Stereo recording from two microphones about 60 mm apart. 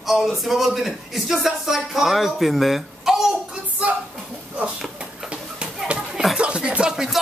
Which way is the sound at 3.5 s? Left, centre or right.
Right.